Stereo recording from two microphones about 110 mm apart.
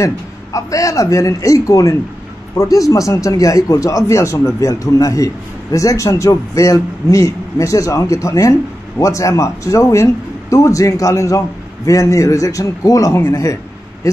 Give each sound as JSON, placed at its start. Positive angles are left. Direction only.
{"t": 0.0, "sound": "speech", "side_deg": 30}